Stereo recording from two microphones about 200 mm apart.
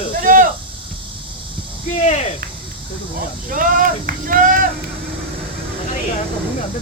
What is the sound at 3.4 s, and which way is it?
Speech, 45° right (ahead or behind).